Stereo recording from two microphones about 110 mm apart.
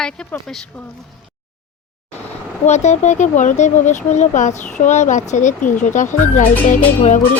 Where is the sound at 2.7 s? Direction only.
90° left.